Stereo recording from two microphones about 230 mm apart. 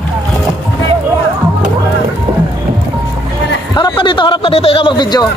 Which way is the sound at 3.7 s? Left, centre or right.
Centre.